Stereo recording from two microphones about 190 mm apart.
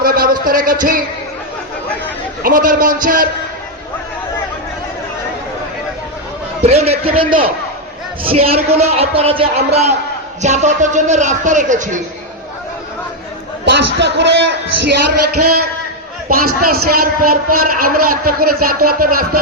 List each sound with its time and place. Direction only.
0.0 s a man's voice: 50° right (ahead or behind)
2.4 s a man's voice: 45° right (ahead or behind)
6.6 s speech: 35° right (ahead or behind)
13.7 s speech: 65° right (ahead or behind)
16.3 s a man's voice: 50° right (ahead or behind)